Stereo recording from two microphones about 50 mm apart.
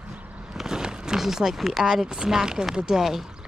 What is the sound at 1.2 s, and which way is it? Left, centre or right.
Speech, centre.